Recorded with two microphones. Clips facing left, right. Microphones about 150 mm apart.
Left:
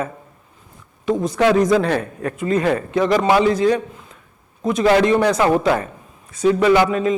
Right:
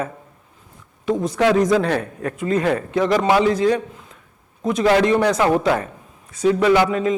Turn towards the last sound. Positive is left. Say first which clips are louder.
# left 1 dB
turn(degrees=15)  # may be behind; listen again after turning